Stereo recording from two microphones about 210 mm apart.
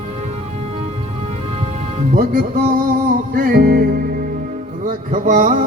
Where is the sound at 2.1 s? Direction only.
45° right (ahead or behind).